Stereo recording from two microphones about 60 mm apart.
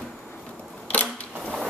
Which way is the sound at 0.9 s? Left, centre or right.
Left.